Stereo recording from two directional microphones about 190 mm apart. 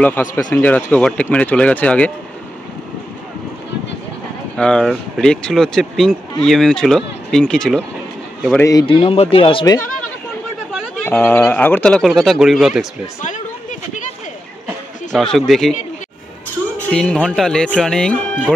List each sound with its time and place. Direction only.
0.0 s speech: 10° left (ahead or behind)
4.6 s speech: 5° left (ahead or behind)
8.5 s speech: 15° left (ahead or behind)
8.8 s speech: 30° left (ahead or behind)
11.1 s speech: 10° left (ahead or behind)
13.2 s a sound: 40° left (ahead or behind)
15.1 s speech: centre (ahead or behind)
16.9 s speech: 5° left (ahead or behind)